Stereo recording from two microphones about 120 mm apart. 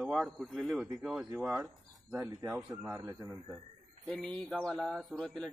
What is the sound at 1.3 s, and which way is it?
Speech, 20° right (ahead or behind).